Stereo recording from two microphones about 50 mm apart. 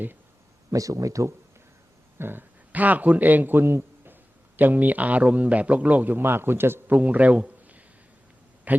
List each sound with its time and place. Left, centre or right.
0.7 s speech: right
2.1 s speech: right
2.7 s a man's voice: right
6.1 s a man's voice: right
6.9 s a man's voice: right